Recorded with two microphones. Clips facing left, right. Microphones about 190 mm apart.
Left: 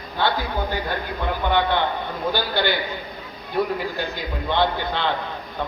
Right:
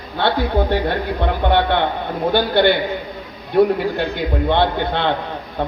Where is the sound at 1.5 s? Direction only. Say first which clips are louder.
Right 3 dB; 65° right (ahead or behind).